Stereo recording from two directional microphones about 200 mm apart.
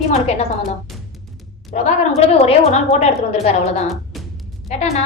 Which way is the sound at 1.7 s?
35° left (ahead or behind).